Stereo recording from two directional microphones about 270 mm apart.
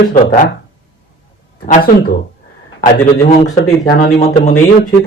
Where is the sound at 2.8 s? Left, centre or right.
Left.